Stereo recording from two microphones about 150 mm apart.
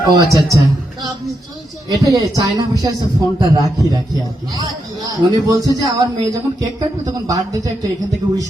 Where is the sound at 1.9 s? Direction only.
25° right (ahead or behind).